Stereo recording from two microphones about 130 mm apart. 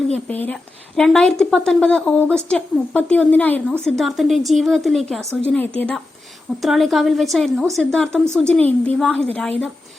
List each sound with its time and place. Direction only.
0.1 s a woman's voice: 10° left (ahead or behind)
3.8 s a woman's voice: centre (ahead or behind)
6.6 s a woman's voice: centre (ahead or behind)